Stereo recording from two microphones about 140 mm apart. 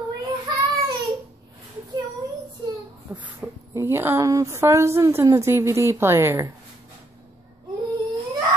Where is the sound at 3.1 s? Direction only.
15° right (ahead or behind).